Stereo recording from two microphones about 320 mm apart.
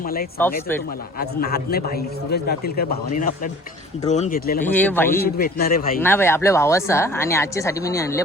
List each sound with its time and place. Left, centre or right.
0.0 s a man's voice: left
4.6 s speech: centre
5.2 s a man's voice: left
6.0 s speech: centre